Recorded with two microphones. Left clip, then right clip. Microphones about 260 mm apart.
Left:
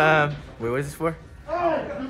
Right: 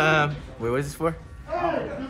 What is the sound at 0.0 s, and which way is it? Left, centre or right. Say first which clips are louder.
Speech: left 2 dB; centre.